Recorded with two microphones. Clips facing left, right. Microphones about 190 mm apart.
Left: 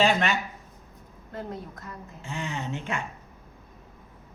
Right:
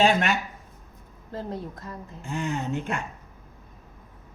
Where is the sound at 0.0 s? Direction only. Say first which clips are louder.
Right 2 dB; 45° right (ahead or behind).